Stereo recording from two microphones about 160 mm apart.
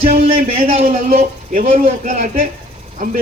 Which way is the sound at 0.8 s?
60° right (ahead or behind).